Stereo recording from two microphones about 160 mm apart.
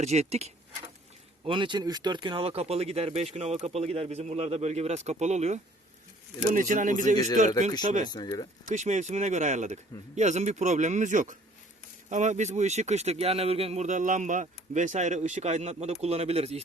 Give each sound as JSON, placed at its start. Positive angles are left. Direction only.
{"t": 0.0, "sound": "speech", "side_deg": -45}
{"t": 1.5, "sound": "speech", "side_deg": -30}
{"t": 8.1, "sound": "speech", "side_deg": 25}
{"t": 8.7, "sound": "speech", "side_deg": -50}